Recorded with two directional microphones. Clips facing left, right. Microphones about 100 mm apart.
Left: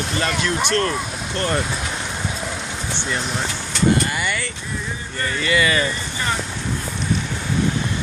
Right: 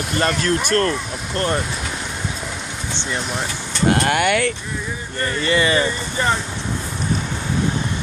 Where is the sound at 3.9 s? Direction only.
70° right (ahead or behind).